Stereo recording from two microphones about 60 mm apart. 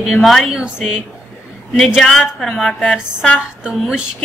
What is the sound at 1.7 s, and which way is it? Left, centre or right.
A woman's voice, centre.